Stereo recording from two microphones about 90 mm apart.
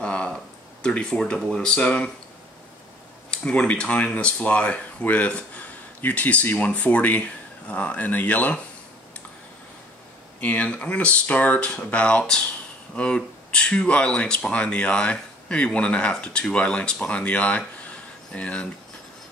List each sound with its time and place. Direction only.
0.0 s a sound: 10° left (ahead or behind)
0.8 s speech: 10° left (ahead or behind)
3.3 s speech: 10° left (ahead or behind)
10.4 s speech: 15° left (ahead or behind)